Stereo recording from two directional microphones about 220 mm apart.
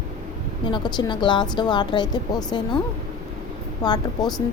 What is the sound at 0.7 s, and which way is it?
A woman's voice, 20° left (ahead or behind).